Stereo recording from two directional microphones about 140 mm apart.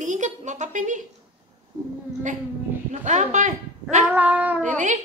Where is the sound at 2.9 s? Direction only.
60° right (ahead or behind).